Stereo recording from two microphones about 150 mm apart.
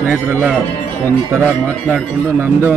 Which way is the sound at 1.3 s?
15° right (ahead or behind).